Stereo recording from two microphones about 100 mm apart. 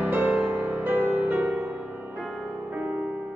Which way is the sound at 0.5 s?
25° right (ahead or behind).